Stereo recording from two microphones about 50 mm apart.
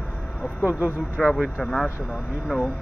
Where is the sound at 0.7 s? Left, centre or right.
Right.